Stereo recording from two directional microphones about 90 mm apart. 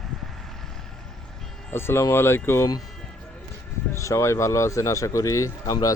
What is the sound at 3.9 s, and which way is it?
Speech, 35° left (ahead or behind).